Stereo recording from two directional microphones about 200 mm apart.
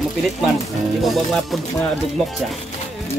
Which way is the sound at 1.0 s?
Centre (ahead or behind).